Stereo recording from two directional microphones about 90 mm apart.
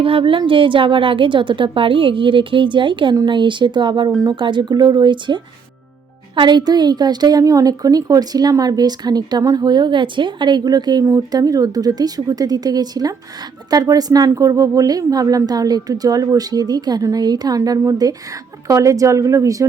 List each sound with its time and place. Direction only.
0.0 s a woman's voice: 80° right; by 19.6 s 35° right (ahead or behind)